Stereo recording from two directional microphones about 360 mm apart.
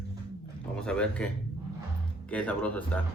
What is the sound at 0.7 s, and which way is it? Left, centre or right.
Speech, centre.